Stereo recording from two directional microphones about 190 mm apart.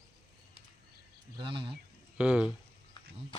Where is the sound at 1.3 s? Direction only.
25° right (ahead or behind).